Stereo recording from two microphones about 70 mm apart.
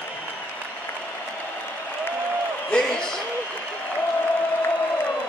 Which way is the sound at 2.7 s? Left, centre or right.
Centre.